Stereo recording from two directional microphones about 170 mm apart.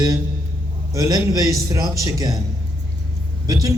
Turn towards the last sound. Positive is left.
turn(degrees=-20)  # may be behind; listen again after turning